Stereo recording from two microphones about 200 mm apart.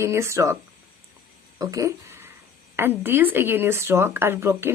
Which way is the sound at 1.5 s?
15° right (ahead or behind).